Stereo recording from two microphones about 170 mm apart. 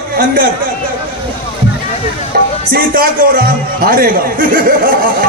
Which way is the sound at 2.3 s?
60° right (ahead or behind).